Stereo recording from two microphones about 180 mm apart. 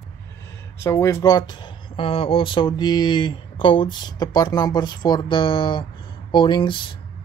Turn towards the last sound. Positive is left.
turn(degrees=25)  # may be behind; listen again after turning